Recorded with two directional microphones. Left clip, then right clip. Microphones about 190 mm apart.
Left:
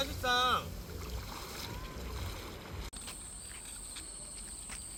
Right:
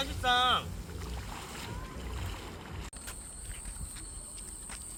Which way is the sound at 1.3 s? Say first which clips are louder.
Right 1 dB; 5° right (ahead or behind).